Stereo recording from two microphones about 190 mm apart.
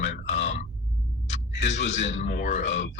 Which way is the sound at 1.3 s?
35° left (ahead or behind).